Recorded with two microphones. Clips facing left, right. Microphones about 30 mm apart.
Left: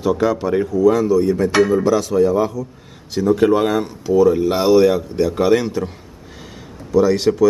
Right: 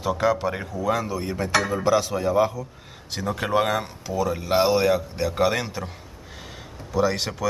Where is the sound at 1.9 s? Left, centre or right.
Centre.